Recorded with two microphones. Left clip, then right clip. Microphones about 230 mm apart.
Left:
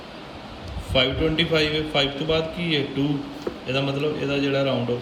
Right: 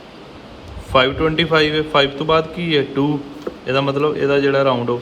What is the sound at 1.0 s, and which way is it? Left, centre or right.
A man's voice, centre.